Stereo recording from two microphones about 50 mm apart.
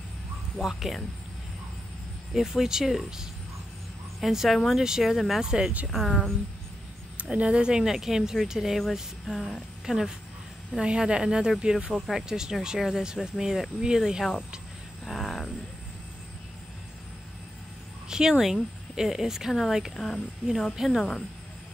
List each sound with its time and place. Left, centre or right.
0.6 s speech: centre
2.3 s speech: centre
5.4 s speech: centre
5.9 s speech: centre
7.2 s speech: right; by 8.8 s centre
9.3 s speech: centre
9.8 s speech: centre
15.0 s a sound: centre
18.0 s speech: centre